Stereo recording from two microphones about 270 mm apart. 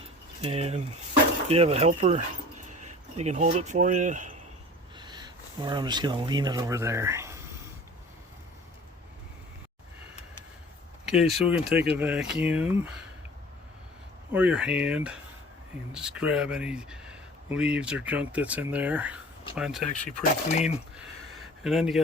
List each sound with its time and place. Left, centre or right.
0.4 s speech: right
4.9 s speech: centre
11.0 s speech: centre
14.3 s speech: centre
20.1 s speech: left
20.9 s a sound: centre